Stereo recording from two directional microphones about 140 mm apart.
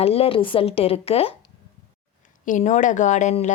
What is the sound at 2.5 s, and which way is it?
Speech, 60° left (ahead or behind).